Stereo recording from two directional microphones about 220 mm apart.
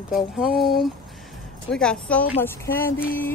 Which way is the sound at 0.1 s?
Centre (ahead or behind).